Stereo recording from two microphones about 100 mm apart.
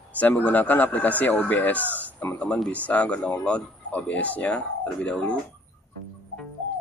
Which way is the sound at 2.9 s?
15° left (ahead or behind).